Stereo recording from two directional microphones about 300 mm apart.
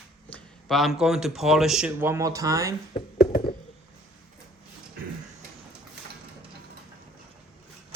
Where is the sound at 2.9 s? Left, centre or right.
Left.